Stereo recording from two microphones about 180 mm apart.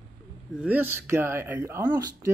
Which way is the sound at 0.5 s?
5° right (ahead or behind).